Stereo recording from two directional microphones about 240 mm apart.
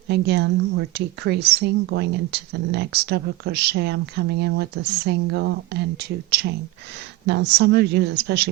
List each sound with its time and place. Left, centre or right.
0.1 s a woman's voice: right